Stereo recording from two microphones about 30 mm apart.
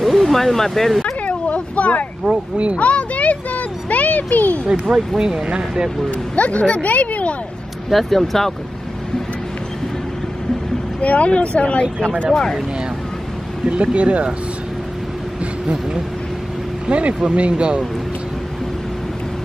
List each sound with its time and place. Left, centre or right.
0.0 s speech: centre
1.2 s a sound: left
2.5 s speech: right
2.8 s a sound: left
4.9 s speech: centre
5.2 s speech: right
6.0 s speech: left
7.9 s speech: centre
11.0 s speech: left
13.7 s speech: right
16.9 s speech: right